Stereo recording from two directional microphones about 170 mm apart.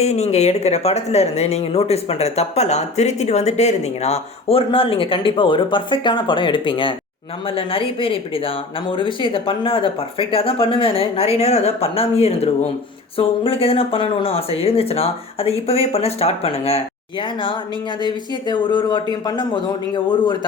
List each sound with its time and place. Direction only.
0.0 s speech: 40° left (ahead or behind)
18.0 s speech: 25° left (ahead or behind)